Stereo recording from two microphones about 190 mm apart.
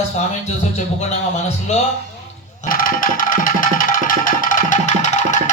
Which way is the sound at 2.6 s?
50° left (ahead or behind).